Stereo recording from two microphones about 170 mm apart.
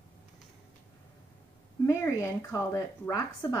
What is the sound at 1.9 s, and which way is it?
Speech, 15° left (ahead or behind).